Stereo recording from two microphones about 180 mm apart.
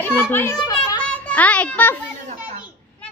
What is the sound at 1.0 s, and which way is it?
Music, 5° left (ahead or behind).